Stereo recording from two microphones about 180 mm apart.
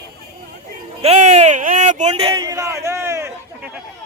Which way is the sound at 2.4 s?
20° right (ahead or behind).